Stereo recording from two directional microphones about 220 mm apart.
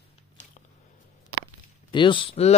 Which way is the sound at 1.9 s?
20° left (ahead or behind).